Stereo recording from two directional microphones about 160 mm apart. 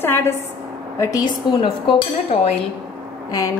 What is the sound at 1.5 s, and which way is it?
Speech, 30° left (ahead or behind).